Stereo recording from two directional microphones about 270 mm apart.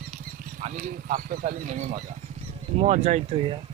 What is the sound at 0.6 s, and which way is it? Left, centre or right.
Speech, right.